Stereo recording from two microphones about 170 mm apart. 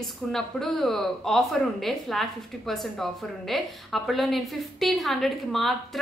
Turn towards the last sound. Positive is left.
turn(degrees=0)  # may be behind; listen again after turning